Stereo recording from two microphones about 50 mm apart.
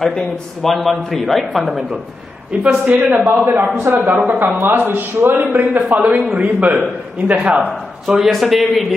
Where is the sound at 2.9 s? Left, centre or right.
Right.